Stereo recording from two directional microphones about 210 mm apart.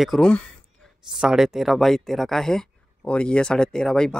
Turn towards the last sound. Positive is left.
turn(degrees=5)  # may be behind; listen again after turning